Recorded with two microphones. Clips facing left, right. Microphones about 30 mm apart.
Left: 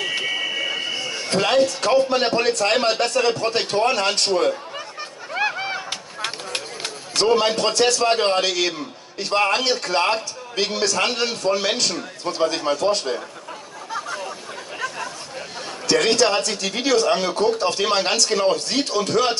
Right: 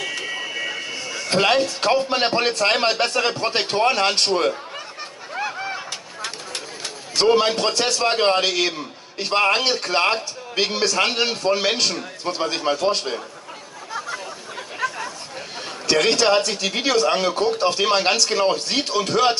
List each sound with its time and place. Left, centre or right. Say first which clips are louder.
0.4 s vehicle: left 3 dB; centre
1.3 s a man's voice: even; right
5.4 s a sound: left 3 dB; left
7.2 s a man's voice: right 1 dB; centre
13.9 s a sound: left 1 dB; centre
15.9 s a man's voice: right 1 dB; centre